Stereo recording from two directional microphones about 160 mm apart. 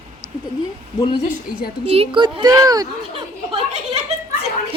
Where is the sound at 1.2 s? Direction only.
65° left (ahead or behind).